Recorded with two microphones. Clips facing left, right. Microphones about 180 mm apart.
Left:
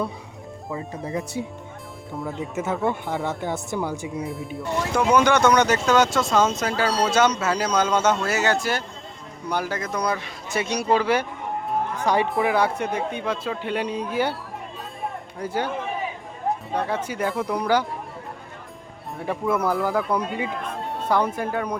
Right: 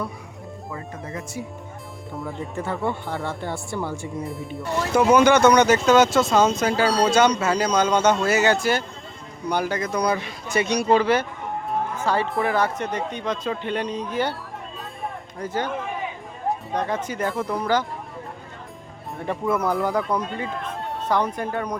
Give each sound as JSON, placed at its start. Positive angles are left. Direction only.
{"t": 1.0, "sound": "speech", "side_deg": 30}
{"t": 2.2, "sound": "speech", "side_deg": 0}
{"t": 2.8, "sound": "speech", "side_deg": 15}
{"t": 4.2, "sound": "speech", "side_deg": 0}
{"t": 12.3, "sound": "speech", "side_deg": 0}
{"t": 15.4, "sound": "speech", "side_deg": 10}
{"t": 16.7, "sound": "speech", "side_deg": 10}
{"t": 19.2, "sound": "speech", "side_deg": 5}